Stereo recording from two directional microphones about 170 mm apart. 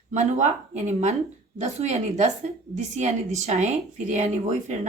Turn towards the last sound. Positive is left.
turn(degrees=-45)  # may be behind; listen again after turning